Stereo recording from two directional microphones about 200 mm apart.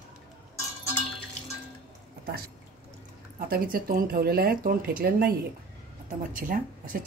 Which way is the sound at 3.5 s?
45° right (ahead or behind).